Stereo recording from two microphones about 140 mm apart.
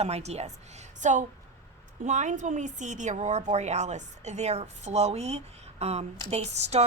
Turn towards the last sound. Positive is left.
turn(degrees=-50)  # may be behind; listen again after turning